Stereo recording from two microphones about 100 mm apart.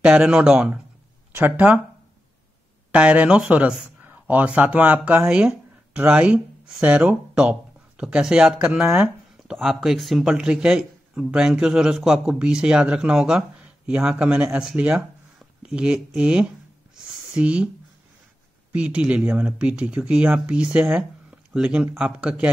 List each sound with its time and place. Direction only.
0.0 s speech: 10° right (ahead or behind)
2.9 s speech: 10° right (ahead or behind)
16.9 s a sound: 5° right (ahead or behind)
18.7 s speech: 15° right (ahead or behind)